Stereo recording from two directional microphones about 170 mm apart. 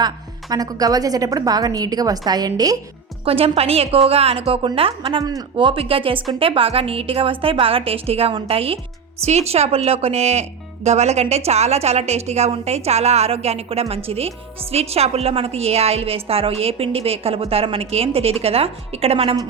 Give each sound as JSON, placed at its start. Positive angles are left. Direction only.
{"t": 0.5, "sound": "a woman's voice", "side_deg": -20}
{"t": 3.2, "sound": "a woman's voice", "side_deg": -35}